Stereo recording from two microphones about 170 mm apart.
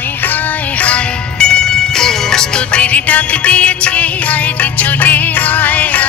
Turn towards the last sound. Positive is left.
turn(degrees=10)  # may be behind; listen again after turning